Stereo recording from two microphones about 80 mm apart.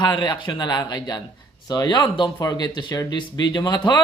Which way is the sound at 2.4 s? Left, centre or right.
Left.